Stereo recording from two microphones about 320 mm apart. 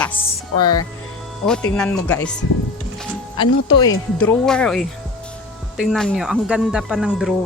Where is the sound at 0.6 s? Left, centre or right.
Left.